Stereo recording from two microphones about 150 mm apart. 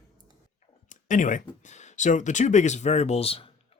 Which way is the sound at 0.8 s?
55° left (ahead or behind).